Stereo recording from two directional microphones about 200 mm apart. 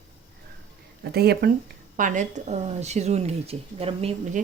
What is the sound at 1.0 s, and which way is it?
Speech, 55° right (ahead or behind).